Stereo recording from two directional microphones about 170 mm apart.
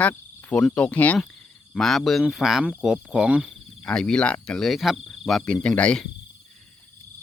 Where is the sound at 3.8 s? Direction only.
5° left (ahead or behind).